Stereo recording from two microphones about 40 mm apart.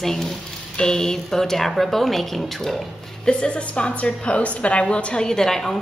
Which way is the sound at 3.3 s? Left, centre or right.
Left.